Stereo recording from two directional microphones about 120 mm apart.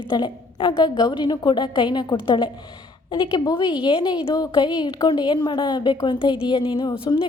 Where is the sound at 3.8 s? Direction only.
40° left (ahead or behind).